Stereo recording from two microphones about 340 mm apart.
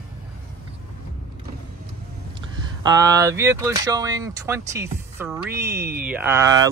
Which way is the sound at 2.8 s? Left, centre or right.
Centre.